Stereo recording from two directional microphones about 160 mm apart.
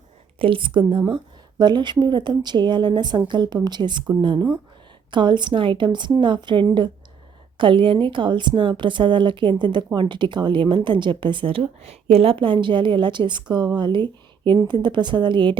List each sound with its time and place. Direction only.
0.3 s a woman's voice: 35° right (ahead or behind)